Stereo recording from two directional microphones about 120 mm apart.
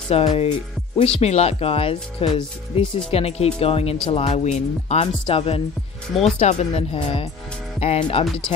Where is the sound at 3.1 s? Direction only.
60° left (ahead or behind).